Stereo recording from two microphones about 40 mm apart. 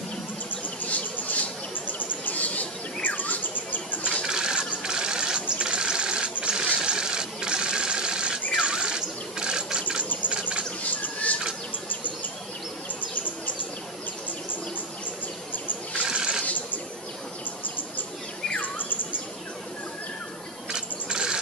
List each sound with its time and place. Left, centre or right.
0.5 s bird: left
4.0 s a sound: right
4.8 s sewing machine: centre
8.5 s bird: right
10.8 s rodents: left
16.0 s bird: right
18.6 s bird: left
20.7 s a sound: right